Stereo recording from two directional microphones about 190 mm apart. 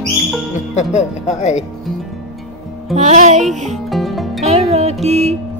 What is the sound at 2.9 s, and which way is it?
Speech, 40° right (ahead or behind).